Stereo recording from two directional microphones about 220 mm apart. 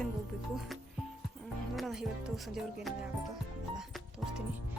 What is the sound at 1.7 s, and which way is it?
Speech, centre (ahead or behind).